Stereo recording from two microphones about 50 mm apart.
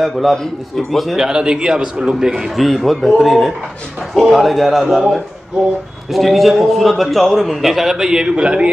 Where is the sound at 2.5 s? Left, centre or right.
Centre.